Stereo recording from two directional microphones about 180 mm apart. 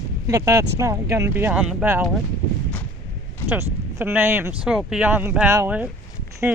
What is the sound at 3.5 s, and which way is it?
Speech, 15° right (ahead or behind).